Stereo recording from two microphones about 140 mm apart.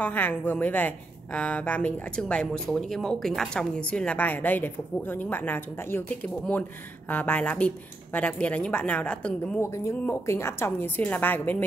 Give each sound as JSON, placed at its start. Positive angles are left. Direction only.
{"t": 0.0, "sound": "a woman's voice", "side_deg": 15}